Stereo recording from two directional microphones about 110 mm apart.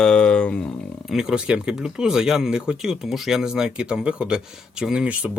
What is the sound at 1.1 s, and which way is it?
Speech, 5° right (ahead or behind).